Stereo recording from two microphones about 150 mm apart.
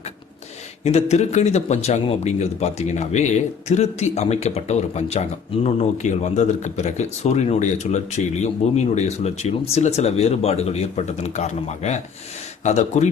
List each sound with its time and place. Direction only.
0.9 s speech: 45° left (ahead or behind)